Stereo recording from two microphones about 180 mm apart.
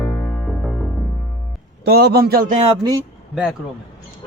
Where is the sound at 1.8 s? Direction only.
65° right (ahead or behind).